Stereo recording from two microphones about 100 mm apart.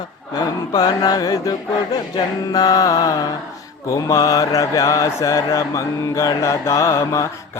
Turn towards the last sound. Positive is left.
turn(degrees=30)  # may be behind; listen again after turning